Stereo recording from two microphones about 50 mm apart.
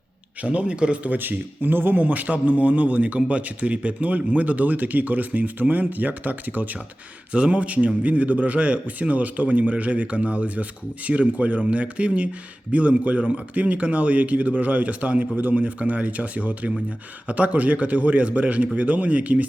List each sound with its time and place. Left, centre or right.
0.4 s a man's voice: right
1.1 s speech: right
7.3 s a man's voice: right